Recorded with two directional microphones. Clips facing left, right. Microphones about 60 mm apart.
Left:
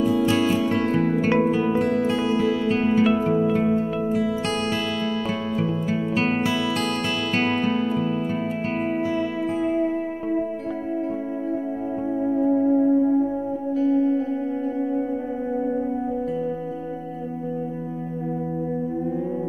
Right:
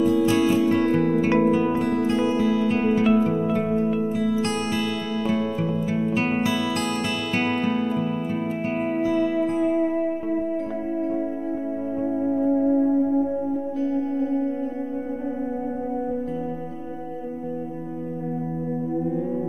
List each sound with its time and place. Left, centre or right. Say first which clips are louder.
0.4 s music: right 2 dB; left
3.3 s music: left 3 dB; left
4.7 s music: left 1 dB; left
7.3 s music: left 1 dB; left
12.2 s music: left 2 dB; centre